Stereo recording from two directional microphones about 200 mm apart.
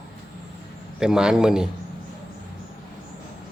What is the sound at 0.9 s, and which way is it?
Speech, 5° right (ahead or behind).